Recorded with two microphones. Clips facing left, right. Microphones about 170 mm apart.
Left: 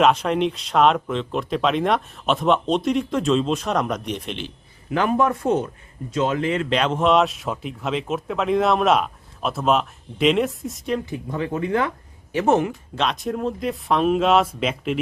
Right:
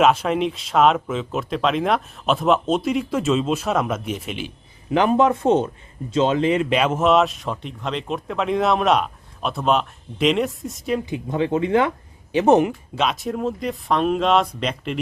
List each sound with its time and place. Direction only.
0.0 s speech: centre (ahead or behind)
4.9 s speech: 25° right (ahead or behind)
6.7 s speech: 5° right (ahead or behind)
11.0 s speech: 20° right (ahead or behind)
13.0 s speech: 5° right (ahead or behind)